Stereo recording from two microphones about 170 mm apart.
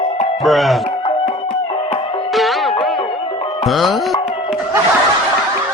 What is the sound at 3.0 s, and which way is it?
Music, 30° left (ahead or behind).